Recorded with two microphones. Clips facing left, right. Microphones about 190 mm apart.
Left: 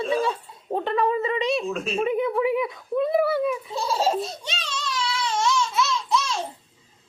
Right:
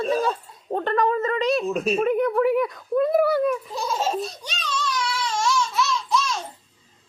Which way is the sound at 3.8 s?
30° left (ahead or behind).